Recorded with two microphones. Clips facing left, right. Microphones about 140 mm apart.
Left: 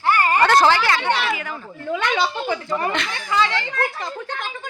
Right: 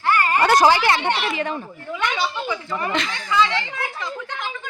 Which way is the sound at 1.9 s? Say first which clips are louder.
Left 3 dB; 70° left (ahead or behind).